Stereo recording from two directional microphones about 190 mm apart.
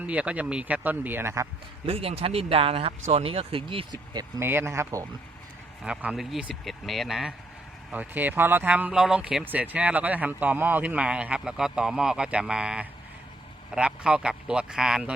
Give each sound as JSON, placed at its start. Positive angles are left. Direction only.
{"t": 0.0, "sound": "speech", "side_deg": -5}
{"t": 1.9, "sound": "speech", "side_deg": -30}